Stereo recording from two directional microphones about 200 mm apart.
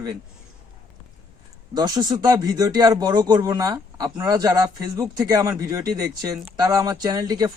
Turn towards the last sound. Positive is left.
turn(degrees=-20)  # may be behind; listen again after turning